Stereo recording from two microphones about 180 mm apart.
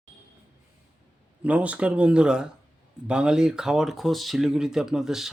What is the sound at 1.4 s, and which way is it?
Speech, 5° right (ahead or behind).